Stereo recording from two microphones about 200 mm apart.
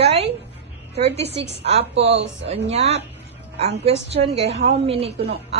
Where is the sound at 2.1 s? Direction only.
60° right (ahead or behind).